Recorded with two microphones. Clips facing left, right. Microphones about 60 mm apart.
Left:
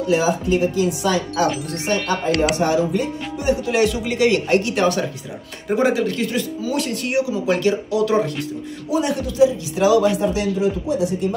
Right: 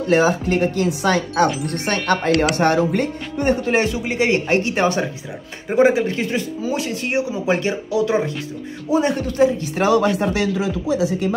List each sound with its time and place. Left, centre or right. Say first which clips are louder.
0.1 s speech: right 2 dB; right
8.9 s speech: right 2 dB; right
10.1 s speech: even; right